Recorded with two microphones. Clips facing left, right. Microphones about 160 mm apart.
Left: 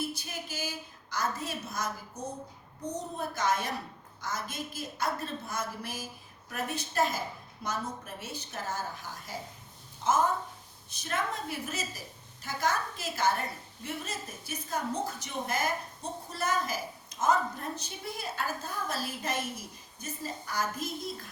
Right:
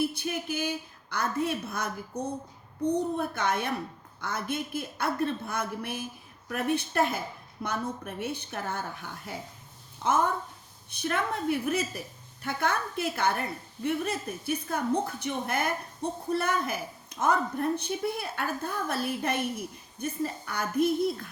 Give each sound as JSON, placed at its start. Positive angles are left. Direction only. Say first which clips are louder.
{"t": 0.0, "sound": "a woman's voice", "louder": "right 7 dB", "side_deg": -60}